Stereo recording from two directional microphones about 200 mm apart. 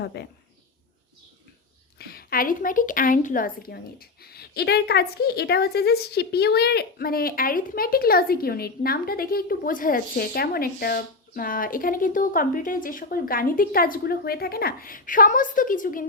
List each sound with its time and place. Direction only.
0.0 s a woman's voice: 55° left (ahead or behind)
2.0 s a woman's voice: 50° left (ahead or behind)